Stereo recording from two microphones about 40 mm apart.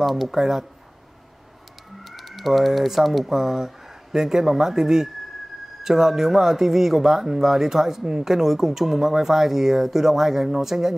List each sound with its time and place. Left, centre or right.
0.0 s speech: centre
2.0 s speech: centre